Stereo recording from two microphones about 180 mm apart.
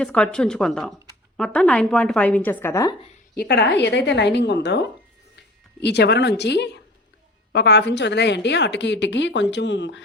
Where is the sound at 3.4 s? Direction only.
65° left (ahead or behind).